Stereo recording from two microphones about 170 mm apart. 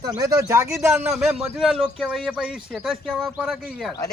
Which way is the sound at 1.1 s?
5° right (ahead or behind).